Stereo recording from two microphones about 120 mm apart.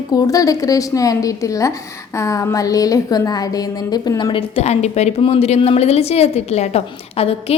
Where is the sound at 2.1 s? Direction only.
25° left (ahead or behind).